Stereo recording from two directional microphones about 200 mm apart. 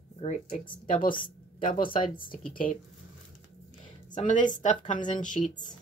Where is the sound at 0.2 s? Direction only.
35° left (ahead or behind).